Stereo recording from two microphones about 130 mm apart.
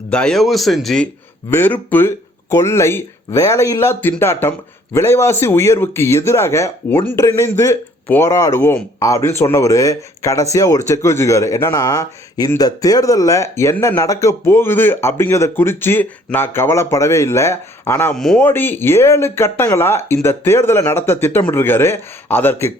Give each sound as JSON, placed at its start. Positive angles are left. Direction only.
{"t": 0.1, "sound": "speech", "side_deg": 5}
{"t": 1.5, "sound": "speech", "side_deg": 15}
{"t": 18.1, "sound": "speech", "side_deg": 5}
{"t": 18.3, "sound": "speech", "side_deg": 15}